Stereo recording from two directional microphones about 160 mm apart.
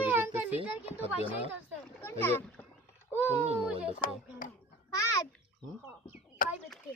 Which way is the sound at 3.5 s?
5° right (ahead or behind).